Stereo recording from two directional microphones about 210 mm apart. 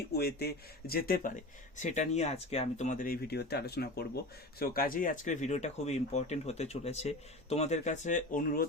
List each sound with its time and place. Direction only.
0.1 s speech: 50° left (ahead or behind)